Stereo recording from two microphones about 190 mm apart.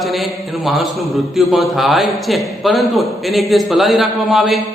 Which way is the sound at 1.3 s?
Centre (ahead or behind).